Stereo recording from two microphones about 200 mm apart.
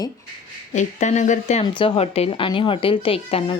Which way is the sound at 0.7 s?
35° left (ahead or behind).